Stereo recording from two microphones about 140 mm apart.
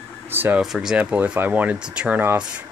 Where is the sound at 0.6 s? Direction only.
5° right (ahead or behind).